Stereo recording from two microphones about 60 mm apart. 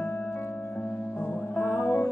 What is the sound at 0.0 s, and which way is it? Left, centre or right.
Music, left.